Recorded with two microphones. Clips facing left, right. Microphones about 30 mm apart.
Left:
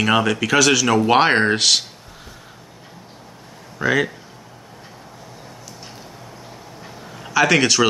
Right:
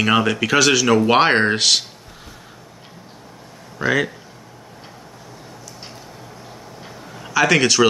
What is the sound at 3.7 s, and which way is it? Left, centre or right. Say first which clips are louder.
Speech: even; centre.